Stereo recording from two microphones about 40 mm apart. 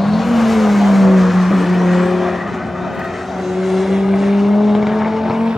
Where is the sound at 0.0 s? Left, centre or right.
Centre.